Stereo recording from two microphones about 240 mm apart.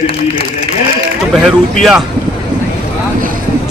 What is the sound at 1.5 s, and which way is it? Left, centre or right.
Speech, centre.